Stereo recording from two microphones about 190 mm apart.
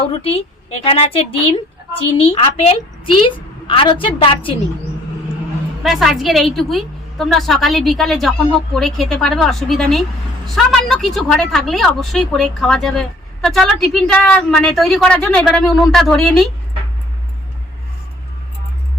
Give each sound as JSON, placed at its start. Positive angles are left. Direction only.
{"t": 0.0, "sound": "a woman's voice", "side_deg": 30}
{"t": 5.8, "sound": "a woman's voice", "side_deg": 0}